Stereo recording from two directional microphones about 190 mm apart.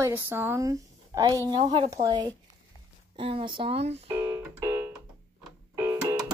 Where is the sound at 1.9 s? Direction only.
20° right (ahead or behind).